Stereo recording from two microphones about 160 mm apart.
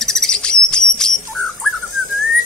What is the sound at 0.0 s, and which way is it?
Bird, 5° left (ahead or behind).